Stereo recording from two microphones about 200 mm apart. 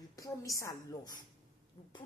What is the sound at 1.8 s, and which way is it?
Owl, 25° left (ahead or behind).